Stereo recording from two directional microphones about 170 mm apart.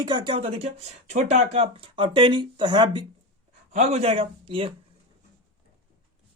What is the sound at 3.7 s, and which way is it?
Speech, 40° right (ahead or behind).